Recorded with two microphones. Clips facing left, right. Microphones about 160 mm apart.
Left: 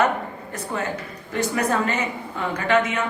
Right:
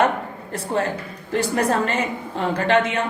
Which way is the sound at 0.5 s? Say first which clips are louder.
Right 5 dB; 30° right (ahead or behind).